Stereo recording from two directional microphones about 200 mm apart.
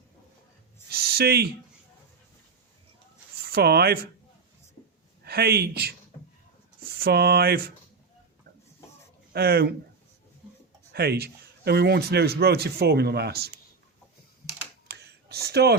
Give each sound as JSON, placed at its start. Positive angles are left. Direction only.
{"t": 0.9, "sound": "a sound", "side_deg": -50}
{"t": 3.5, "sound": "a man's voice", "side_deg": -55}
{"t": 5.2, "sound": "speech", "side_deg": -55}
{"t": 9.3, "sound": "a man's voice", "side_deg": -50}
{"t": 10.9, "sound": "a man's voice", "side_deg": -55}
{"t": 14.8, "sound": "a sound", "side_deg": -55}